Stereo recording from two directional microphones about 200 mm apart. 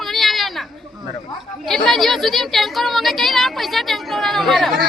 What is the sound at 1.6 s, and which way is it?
Speech, centre (ahead or behind).